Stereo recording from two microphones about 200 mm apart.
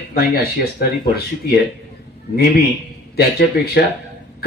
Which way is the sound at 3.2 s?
50° left (ahead or behind).